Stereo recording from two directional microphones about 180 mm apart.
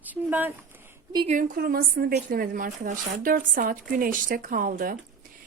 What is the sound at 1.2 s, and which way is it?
A woman's voice, 45° right (ahead or behind).